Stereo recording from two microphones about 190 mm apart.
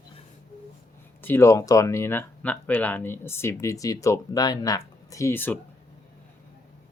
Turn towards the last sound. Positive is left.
turn(degrees=10)  # may be behind; listen again after turning